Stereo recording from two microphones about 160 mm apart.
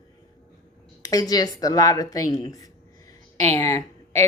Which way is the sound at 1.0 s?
25° left (ahead or behind).